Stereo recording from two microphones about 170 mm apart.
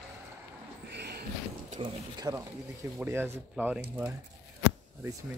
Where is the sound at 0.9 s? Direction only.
75° right (ahead or behind).